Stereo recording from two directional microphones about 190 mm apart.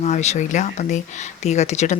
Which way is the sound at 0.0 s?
35° left (ahead or behind).